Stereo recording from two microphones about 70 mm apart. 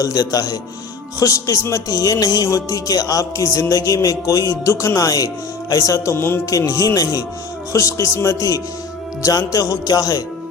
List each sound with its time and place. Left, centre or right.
0.0 s music: left
6.1 s speech: left
6.4 s music: left
7.7 s speech: left
9.2 s music: left